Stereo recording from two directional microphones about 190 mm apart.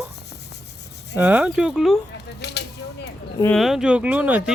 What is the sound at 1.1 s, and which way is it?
Speech, 5° right (ahead or behind).